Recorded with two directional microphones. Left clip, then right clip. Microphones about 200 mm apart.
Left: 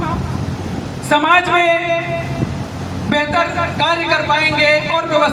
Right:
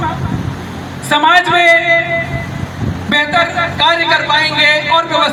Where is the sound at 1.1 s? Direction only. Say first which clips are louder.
Right 3 dB; 40° right (ahead or behind).